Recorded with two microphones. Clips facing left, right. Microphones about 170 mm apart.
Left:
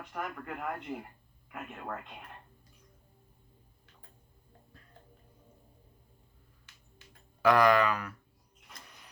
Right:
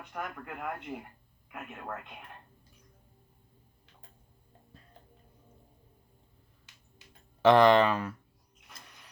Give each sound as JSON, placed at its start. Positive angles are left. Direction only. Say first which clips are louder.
{"t": 0.1, "sound": "speech", "louder": "left 1 dB", "side_deg": 0}
{"t": 7.4, "sound": "speech", "louder": "right 3 dB", "side_deg": -25}